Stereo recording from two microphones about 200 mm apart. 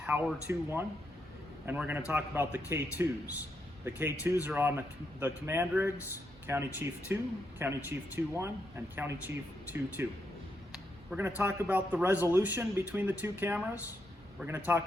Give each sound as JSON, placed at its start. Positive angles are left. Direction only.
{"t": 0.0, "sound": "a man's voice", "side_deg": -5}
{"t": 11.3, "sound": "a man's voice", "side_deg": -10}